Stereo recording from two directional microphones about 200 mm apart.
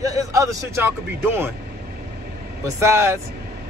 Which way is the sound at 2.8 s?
15° right (ahead or behind).